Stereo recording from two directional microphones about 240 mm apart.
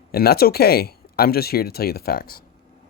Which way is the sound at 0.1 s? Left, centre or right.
Left.